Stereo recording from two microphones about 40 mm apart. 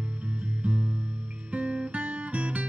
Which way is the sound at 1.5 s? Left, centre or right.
Right.